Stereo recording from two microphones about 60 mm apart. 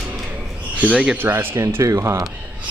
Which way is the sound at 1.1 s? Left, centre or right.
Right.